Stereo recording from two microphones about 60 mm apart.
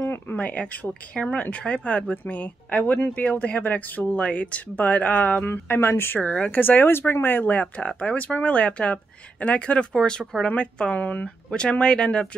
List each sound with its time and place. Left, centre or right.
0.0 s a sound: left
0.4 s speech: left
6.2 s speech: centre
6.5 s speech: left; by 12.3 s centre